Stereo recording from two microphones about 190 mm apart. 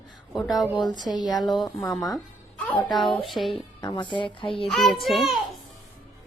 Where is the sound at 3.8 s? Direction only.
25° left (ahead or behind).